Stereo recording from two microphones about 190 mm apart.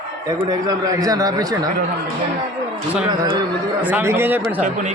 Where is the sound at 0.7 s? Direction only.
20° right (ahead or behind).